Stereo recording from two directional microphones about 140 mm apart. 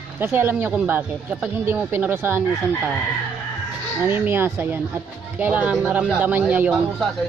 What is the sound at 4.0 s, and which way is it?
A man's voice, 15° right (ahead or behind).